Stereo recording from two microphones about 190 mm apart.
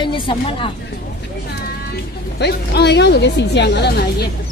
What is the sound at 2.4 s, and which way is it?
A woman's voice, 60° left (ahead or behind).